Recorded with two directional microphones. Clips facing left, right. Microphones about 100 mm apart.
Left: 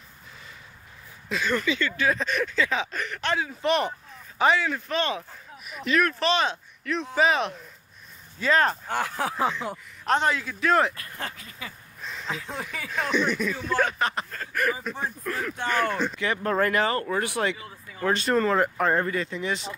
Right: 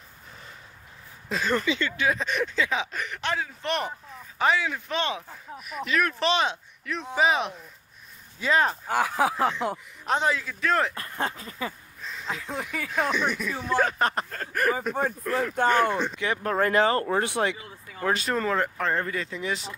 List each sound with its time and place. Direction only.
1.3 s speech: 35° right (ahead or behind); by 3.3 s 15° right (ahead or behind)
3.3 s speech: 5° left (ahead or behind)
4.6 s speech: 10° right (ahead or behind)
5.6 s speech: centre (ahead or behind)
6.0 s speech: 20° right (ahead or behind); by 11.0 s 5° left (ahead or behind)
11.0 s speech: 30° right (ahead or behind)
12.2 s speech: centre (ahead or behind); by 13.8 s 20° right (ahead or behind)
13.8 s speech: 40° right (ahead or behind)
15.3 s speech: 25° right (ahead or behind)
18.0 s speech: 5° right (ahead or behind); by 19.0 s 10° left (ahead or behind)
19.0 s speech: centre (ahead or behind)